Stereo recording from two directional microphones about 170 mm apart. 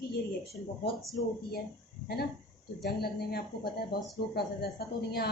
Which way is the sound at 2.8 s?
70° left (ahead or behind).